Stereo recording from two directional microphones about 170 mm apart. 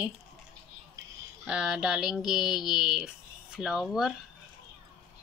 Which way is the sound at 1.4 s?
5° right (ahead or behind).